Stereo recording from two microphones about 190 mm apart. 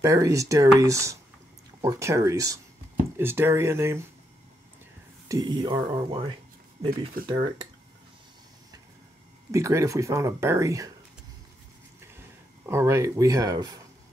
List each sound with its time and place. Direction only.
0.0 s speech: 15° right (ahead or behind)
5.3 s speech: 20° right (ahead or behind)
9.5 s speech: 15° right (ahead or behind)
12.0 s a sound: 15° right (ahead or behind)